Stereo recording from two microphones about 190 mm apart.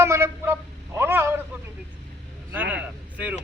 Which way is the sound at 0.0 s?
15° right (ahead or behind).